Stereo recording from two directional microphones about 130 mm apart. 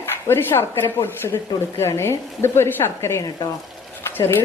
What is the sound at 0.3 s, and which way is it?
Speech, 20° left (ahead or behind).